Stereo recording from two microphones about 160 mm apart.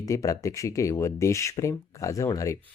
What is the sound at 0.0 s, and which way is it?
Speech, 20° left (ahead or behind).